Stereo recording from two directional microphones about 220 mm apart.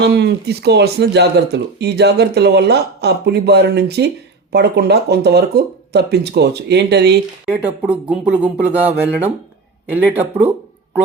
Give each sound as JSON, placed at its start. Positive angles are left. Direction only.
{"t": 0.0, "sound": "speech", "side_deg": -50}
{"t": 7.4, "sound": "speech", "side_deg": -5}